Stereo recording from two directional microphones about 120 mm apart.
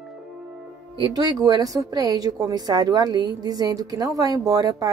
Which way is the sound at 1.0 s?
30° right (ahead or behind).